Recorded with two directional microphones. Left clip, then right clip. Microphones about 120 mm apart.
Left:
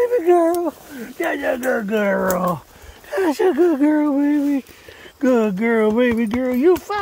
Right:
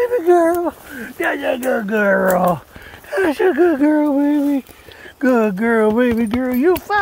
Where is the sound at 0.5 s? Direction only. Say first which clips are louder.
Right 2 dB; 25° left (ahead or behind).